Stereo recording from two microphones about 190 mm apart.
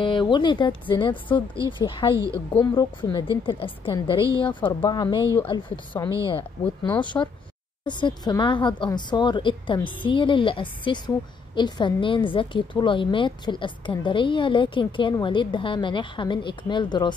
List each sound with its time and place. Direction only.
0.0 s a woman's voice: 25° left (ahead or behind)
2.1 s a woman's voice: 15° right (ahead or behind)
2.5 s a woman's voice: 25° left (ahead or behind)